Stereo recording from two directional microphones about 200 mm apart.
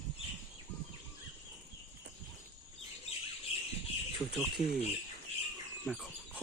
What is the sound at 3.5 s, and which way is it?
Bird, 30° left (ahead or behind).